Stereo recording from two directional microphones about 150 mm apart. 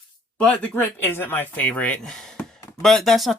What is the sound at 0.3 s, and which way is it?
Speech, 5° left (ahead or behind).